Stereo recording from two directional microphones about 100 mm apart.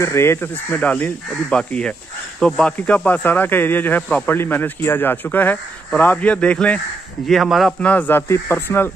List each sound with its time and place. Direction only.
0.0 s speech: 25° left (ahead or behind); by 6.8 s 10° left (ahead or behind)
7.2 s a man's voice: centre (ahead or behind)
7.8 s speech: 15° left (ahead or behind)